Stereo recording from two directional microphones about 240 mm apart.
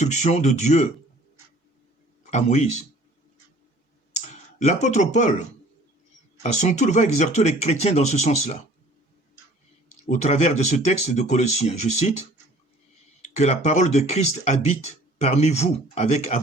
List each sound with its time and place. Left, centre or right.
0.0 s speech: left
2.3 s speech: left
4.1 s clicking: left
6.4 s speech: left
10.1 s speech: left
13.2 s speech: left